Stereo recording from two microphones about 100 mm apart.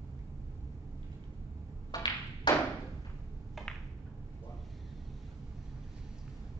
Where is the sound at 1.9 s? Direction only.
35° left (ahead or behind).